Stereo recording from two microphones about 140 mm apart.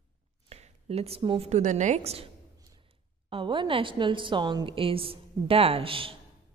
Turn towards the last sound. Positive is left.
turn(degrees=-40)  # may be behind; listen again after turning